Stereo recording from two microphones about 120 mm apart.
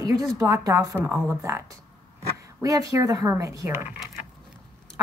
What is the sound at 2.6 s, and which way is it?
A woman's voice, 30° right (ahead or behind).